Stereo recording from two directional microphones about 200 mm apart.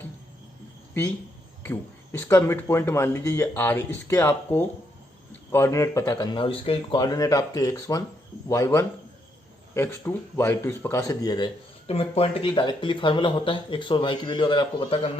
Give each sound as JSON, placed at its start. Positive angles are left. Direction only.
{"t": 1.6, "sound": "speech", "side_deg": 10}
{"t": 11.9, "sound": "speech", "side_deg": 30}